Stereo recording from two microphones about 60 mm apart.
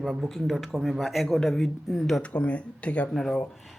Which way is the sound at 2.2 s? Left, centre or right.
Left.